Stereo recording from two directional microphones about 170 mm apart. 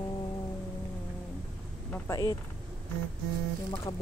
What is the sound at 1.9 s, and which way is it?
Speech, 20° left (ahead or behind).